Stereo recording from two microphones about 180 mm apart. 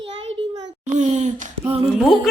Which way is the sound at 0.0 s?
30° right (ahead or behind).